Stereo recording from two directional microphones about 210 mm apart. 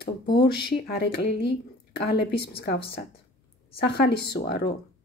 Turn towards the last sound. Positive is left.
turn(degrees=50)  # may be behind; listen again after turning